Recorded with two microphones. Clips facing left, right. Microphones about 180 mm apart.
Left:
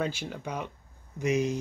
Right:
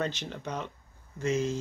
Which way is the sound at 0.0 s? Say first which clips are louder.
Left 1 dB; 10° left (ahead or behind).